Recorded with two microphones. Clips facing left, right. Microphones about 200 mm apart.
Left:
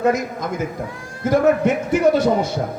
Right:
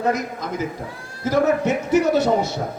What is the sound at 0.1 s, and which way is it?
A man's voice, 50° left (ahead or behind).